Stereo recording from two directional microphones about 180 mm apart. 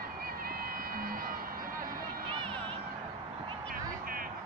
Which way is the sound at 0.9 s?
55° right (ahead or behind).